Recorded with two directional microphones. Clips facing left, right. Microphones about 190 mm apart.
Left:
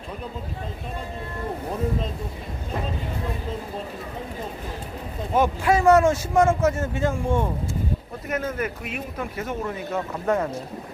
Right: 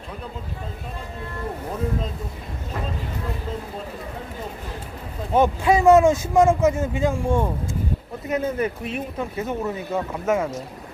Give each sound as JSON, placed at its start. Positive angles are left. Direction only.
{"t": 5.3, "sound": "speech", "side_deg": -20}
{"t": 8.5, "sound": "speech", "side_deg": -30}
{"t": 9.4, "sound": "speech", "side_deg": -15}
{"t": 10.2, "sound": "speech", "side_deg": -5}